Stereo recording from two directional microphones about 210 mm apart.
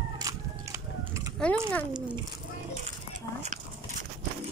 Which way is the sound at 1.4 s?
5° left (ahead or behind).